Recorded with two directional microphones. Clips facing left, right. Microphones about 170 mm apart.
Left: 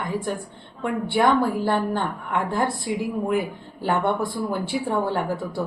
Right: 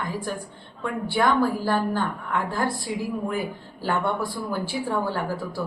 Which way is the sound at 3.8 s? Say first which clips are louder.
Left 3 dB; 25° left (ahead or behind).